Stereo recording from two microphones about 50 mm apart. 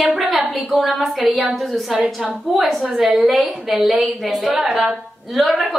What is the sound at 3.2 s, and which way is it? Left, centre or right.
A woman's voice, centre.